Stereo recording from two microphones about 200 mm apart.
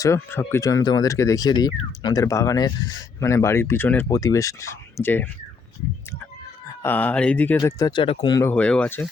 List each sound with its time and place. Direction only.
0.0 s speech: 15° left (ahead or behind)
6.8 s speech: 10° left (ahead or behind)